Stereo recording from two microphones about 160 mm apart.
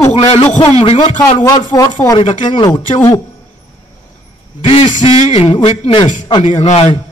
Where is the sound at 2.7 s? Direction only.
20° left (ahead or behind).